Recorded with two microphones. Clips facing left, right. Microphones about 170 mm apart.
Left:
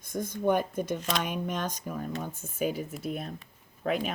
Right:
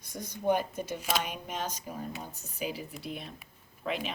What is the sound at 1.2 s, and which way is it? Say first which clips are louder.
Speech: left 4 dB; 50° left (ahead or behind).